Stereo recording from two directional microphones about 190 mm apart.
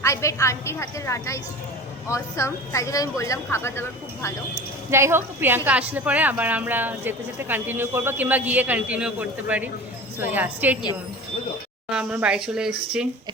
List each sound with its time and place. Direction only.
0.0 s speech: 15° left (ahead or behind)
4.9 s a woman's voice: 15° right (ahead or behind)
11.9 s speech: 5° right (ahead or behind)